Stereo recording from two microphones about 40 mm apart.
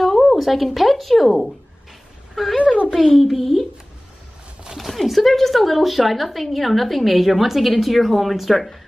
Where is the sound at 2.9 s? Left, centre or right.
Centre.